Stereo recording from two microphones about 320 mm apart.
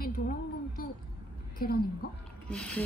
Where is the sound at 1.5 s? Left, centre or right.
Left.